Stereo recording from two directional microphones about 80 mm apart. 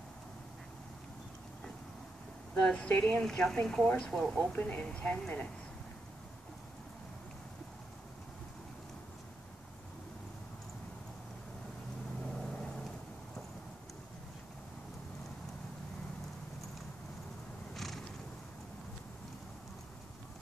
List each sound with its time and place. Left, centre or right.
2.6 s a woman's voice: centre
3.2 s a woman's voice: centre
4.5 s a woman's voice: centre
12.4 s vehicle: centre
17.7 s cat: centre